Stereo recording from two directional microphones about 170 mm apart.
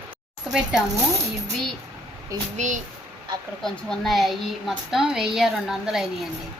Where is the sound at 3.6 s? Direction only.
5° left (ahead or behind).